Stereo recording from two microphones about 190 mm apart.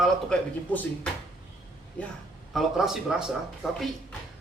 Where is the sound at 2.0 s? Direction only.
5° left (ahead or behind).